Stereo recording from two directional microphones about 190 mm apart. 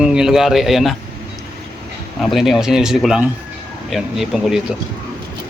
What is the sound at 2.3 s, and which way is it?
A man's voice, centre (ahead or behind).